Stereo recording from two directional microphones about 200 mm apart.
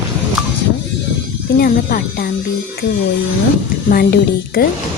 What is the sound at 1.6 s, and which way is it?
Speech, 45° left (ahead or behind).